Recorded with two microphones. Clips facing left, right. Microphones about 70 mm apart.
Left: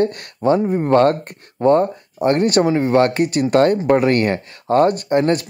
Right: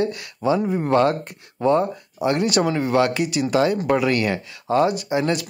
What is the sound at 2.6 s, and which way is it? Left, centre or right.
Speech, left.